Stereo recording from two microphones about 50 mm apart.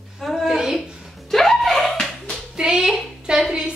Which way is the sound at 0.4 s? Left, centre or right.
Centre.